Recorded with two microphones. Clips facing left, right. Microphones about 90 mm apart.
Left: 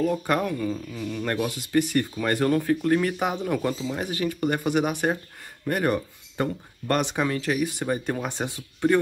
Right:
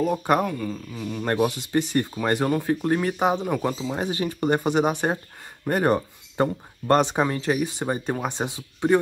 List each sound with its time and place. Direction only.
0.0 s speech: 20° right (ahead or behind)
1.2 s speech: 25° right (ahead or behind)
3.9 s speech: 30° right (ahead or behind)